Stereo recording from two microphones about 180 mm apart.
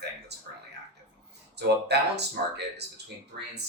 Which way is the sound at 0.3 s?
65° right (ahead or behind).